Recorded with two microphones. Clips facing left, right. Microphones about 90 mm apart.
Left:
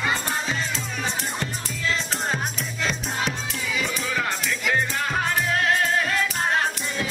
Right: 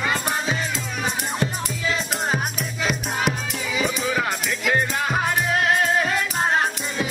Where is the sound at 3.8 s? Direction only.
15° right (ahead or behind).